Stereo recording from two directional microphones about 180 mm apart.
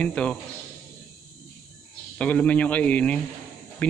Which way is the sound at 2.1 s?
5° left (ahead or behind).